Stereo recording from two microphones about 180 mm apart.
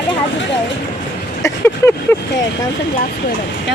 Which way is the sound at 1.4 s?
15° left (ahead or behind).